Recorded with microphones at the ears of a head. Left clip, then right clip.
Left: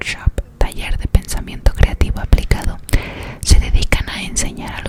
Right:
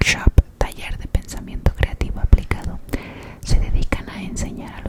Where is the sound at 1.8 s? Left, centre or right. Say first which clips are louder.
Left 5 dB; left.